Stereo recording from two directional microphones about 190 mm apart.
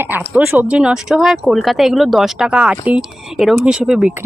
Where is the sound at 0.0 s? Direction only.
10° right (ahead or behind).